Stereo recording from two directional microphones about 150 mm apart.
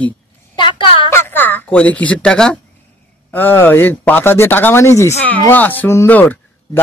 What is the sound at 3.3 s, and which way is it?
Speech, 10° left (ahead or behind).